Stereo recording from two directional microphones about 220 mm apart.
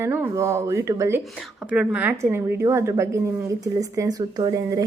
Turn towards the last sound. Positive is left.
turn(degrees=-15)  # may be behind; listen again after turning